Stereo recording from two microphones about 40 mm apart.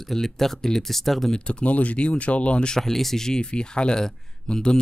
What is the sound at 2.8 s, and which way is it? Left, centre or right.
Speech, centre.